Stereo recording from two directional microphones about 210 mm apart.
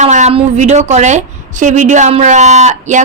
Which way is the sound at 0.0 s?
35° right (ahead or behind).